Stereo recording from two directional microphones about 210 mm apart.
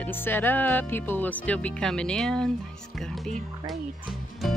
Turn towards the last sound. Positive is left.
turn(degrees=0)  # may be behind; listen again after turning